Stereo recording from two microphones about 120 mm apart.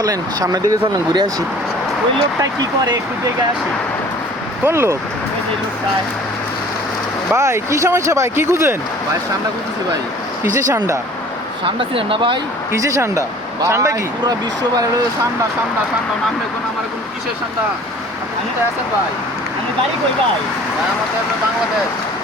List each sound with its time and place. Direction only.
0.0 s speech: 30° right (ahead or behind)
4.6 s speech: 20° right (ahead or behind)
7.3 s speech: 25° right (ahead or behind)
11.6 s speech: 45° right (ahead or behind)
12.7 s speech: 25° right (ahead or behind)